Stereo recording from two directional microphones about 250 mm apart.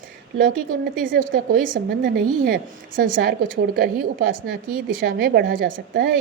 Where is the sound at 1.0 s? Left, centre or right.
Right.